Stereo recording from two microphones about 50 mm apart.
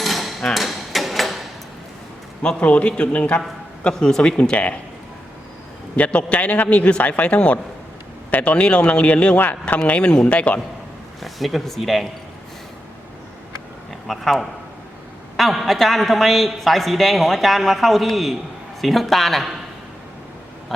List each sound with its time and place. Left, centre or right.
0.0 s hammer: centre
2.4 s a man's voice: left
3.8 s a man's voice: centre
6.0 s a man's voice: left
9.4 s speech: left
10.0 s a man's voice: centre
10.2 s a man's voice: left
11.2 s speech: centre
14.1 s a man's voice: centre